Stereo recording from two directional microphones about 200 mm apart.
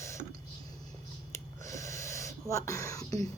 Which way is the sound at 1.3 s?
15° left (ahead or behind).